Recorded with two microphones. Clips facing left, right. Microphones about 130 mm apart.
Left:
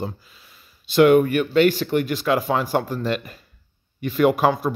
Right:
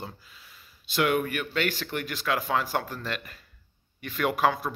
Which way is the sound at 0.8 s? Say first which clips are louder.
Left 11 dB; 30° left (ahead or behind).